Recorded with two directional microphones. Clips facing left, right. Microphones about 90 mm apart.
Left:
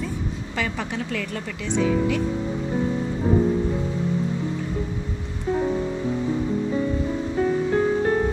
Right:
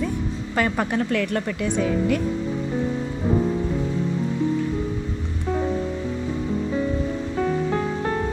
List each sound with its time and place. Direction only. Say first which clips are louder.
0.6 s a woman's voice: right 6 dB; 50° right (ahead or behind)